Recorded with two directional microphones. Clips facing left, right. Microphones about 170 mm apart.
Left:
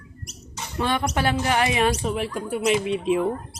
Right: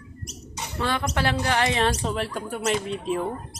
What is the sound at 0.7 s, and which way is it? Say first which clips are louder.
Speech: left 2 dB; 20° left (ahead or behind).